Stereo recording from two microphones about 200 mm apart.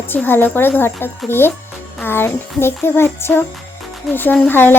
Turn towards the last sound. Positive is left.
turn(degrees=10)  # may be behind; listen again after turning